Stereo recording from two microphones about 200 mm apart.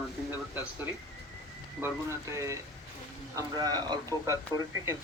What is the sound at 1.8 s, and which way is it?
Speech, 15° right (ahead or behind).